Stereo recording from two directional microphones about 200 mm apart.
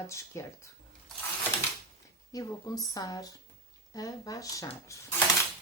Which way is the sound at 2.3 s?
20° left (ahead or behind).